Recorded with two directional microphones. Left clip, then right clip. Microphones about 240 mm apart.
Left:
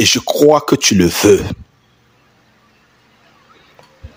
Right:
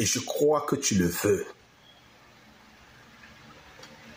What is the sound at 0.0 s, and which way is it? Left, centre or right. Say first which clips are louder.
Speech: left 15 dB; left.